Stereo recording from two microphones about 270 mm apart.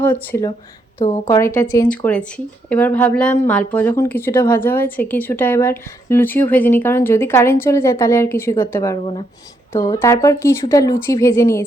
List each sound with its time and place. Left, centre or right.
0.0 s a woman's voice: centre
1.0 s a woman's voice: left
1.3 s a woman's voice: centre